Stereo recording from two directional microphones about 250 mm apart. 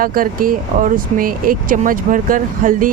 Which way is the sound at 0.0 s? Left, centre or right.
Right.